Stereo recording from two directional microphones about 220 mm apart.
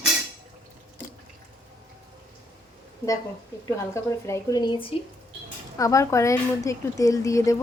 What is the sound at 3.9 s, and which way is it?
A woman's voice, 15° left (ahead or behind).